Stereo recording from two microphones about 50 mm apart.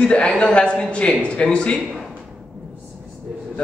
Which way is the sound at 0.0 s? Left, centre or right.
Centre.